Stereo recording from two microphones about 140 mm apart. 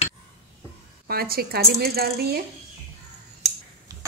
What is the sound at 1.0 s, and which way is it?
Speech, 90° right.